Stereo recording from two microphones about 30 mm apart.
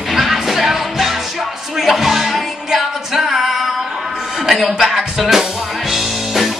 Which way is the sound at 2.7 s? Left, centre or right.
Centre.